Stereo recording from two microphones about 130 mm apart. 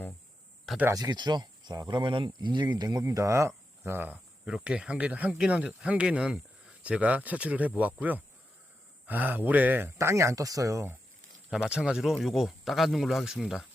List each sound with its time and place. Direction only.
0.9 s speech: 30° right (ahead or behind)
3.0 s speech: 25° right (ahead or behind)
11.4 s speech: 5° right (ahead or behind)